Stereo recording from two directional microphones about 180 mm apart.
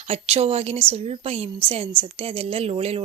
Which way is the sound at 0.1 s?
35° right (ahead or behind).